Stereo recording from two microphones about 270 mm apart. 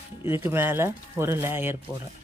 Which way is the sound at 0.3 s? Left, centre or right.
Centre.